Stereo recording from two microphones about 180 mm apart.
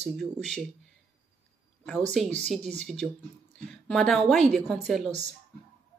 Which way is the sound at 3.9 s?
Centre (ahead or behind).